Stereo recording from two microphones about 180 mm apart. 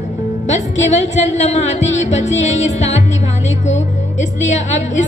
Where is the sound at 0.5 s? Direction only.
40° left (ahead or behind).